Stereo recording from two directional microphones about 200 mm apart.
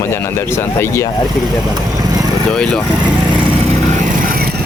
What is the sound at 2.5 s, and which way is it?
Speech, 5° left (ahead or behind).